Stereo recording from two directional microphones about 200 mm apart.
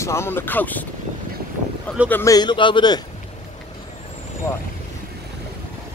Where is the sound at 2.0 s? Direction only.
15° left (ahead or behind).